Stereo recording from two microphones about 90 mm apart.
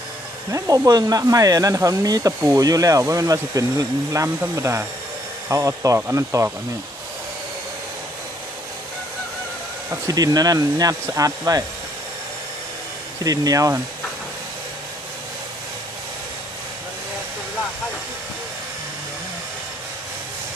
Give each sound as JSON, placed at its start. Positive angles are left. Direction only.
{"t": 0.5, "sound": "speech", "side_deg": -45}
{"t": 10.1, "sound": "speech", "side_deg": -45}
{"t": 13.2, "sound": "speech", "side_deg": -45}